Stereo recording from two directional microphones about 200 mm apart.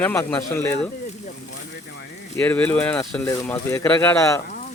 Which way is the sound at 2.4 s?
10° left (ahead or behind).